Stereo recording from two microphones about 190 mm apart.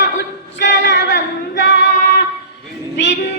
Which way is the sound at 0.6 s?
70° left (ahead or behind).